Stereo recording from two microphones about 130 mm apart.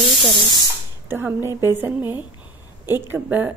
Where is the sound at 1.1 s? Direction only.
20° right (ahead or behind).